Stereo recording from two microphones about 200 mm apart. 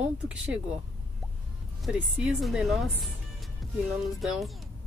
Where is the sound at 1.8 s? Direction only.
5° right (ahead or behind).